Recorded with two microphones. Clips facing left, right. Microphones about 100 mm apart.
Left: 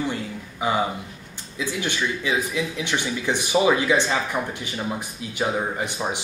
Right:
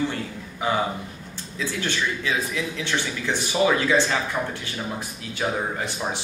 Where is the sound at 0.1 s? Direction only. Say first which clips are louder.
Left 1 dB; 15° left (ahead or behind).